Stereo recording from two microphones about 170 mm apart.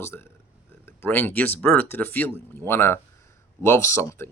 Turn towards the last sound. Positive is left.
turn(degrees=15)  # may be behind; listen again after turning